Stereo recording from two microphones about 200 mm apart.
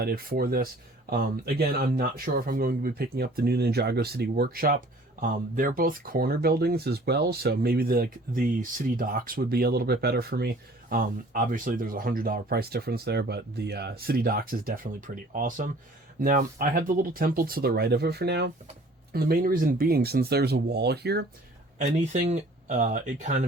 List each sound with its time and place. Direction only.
0.0 s speech: 50° right (ahead or behind)
21.8 s speech: 35° right (ahead or behind)